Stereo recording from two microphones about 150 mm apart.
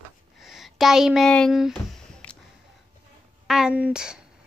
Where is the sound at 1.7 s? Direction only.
10° left (ahead or behind).